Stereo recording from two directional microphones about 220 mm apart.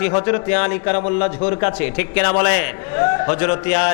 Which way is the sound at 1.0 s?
25° left (ahead or behind).